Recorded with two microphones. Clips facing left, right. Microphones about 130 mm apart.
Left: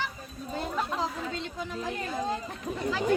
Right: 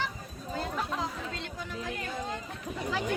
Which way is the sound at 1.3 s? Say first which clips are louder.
Left 4 dB; 25° left (ahead or behind).